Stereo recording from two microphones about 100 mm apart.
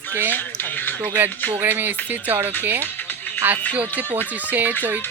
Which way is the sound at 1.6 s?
20° right (ahead or behind).